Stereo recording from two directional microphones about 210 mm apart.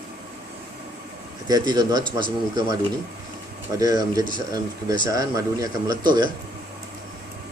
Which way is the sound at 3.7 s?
15° right (ahead or behind).